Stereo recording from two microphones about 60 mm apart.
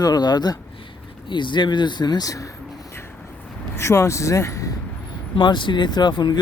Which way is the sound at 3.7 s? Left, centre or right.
Left.